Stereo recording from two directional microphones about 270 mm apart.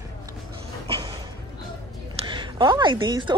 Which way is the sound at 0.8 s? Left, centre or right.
Centre.